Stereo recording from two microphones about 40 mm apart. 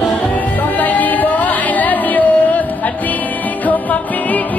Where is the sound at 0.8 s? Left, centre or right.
Left.